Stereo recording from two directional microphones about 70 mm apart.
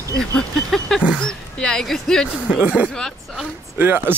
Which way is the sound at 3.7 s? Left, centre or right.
Right.